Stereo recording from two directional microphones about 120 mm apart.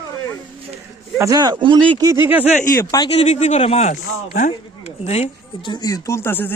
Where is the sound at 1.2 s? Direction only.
30° right (ahead or behind).